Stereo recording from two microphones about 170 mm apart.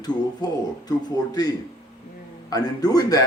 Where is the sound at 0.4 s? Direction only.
25° left (ahead or behind).